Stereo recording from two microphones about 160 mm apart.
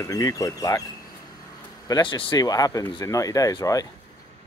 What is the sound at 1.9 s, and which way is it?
Speech, 30° left (ahead or behind).